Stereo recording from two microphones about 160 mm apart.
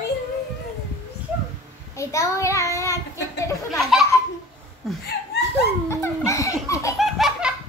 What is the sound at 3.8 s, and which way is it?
Speech, centre (ahead or behind).